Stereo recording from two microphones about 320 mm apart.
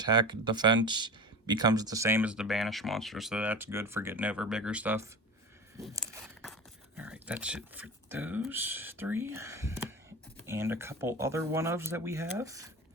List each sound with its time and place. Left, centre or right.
0.0 s speech: centre